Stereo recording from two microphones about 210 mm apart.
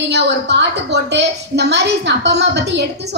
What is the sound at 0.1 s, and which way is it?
A woman's voice, 55° right (ahead or behind).